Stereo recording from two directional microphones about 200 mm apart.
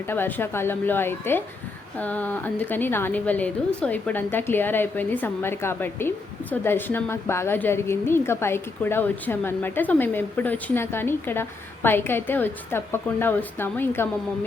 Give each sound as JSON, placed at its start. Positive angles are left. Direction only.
{"t": 0.0, "sound": "a woman's voice", "side_deg": 10}